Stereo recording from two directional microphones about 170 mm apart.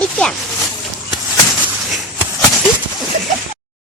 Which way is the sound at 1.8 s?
Centre (ahead or behind).